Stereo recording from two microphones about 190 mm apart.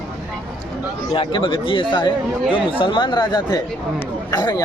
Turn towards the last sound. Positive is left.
turn(degrees=20)  # may be behind; listen again after turning